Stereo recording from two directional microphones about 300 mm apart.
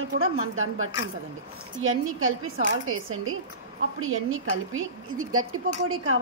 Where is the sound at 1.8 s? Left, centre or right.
Right.